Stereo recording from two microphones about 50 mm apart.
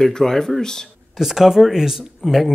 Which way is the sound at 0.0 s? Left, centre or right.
Centre.